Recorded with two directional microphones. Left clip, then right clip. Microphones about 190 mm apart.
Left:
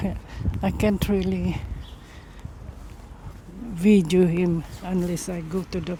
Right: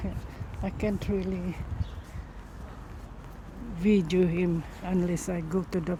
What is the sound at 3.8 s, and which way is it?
Speech, 45° left (ahead or behind).